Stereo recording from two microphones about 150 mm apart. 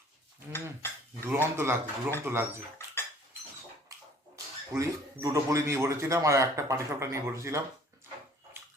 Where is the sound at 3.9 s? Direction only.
20° right (ahead or behind).